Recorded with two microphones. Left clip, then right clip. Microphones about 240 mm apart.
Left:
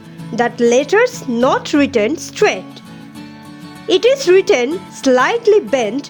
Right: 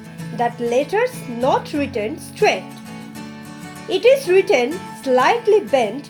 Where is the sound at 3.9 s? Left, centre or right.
Left.